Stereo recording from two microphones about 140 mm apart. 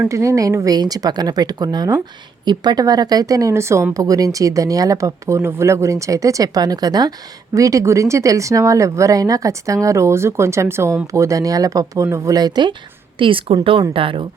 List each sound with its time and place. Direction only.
0.0 s a woman's voice: 20° right (ahead or behind); by 14.3 s 40° right (ahead or behind)